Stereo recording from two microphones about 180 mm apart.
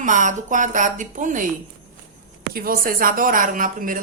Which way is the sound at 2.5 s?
55° right (ahead or behind).